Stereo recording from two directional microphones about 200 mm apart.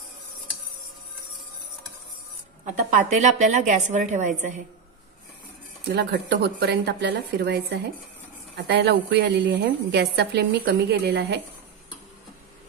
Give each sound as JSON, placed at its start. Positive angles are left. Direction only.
{"t": 2.6, "sound": "a woman's voice", "side_deg": -40}
{"t": 5.9, "sound": "a woman's voice", "side_deg": -55}